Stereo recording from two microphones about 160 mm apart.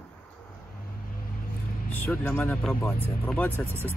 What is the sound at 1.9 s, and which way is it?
Speech, 10° left (ahead or behind).